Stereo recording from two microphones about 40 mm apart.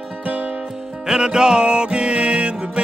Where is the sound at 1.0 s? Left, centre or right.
Centre.